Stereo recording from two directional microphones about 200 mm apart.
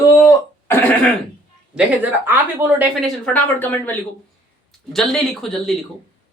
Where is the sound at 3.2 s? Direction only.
10° left (ahead or behind).